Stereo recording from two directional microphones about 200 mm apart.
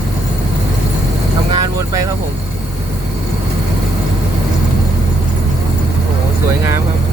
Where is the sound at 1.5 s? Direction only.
15° right (ahead or behind).